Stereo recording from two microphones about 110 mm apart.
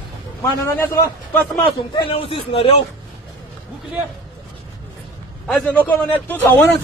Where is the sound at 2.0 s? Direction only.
55° left (ahead or behind).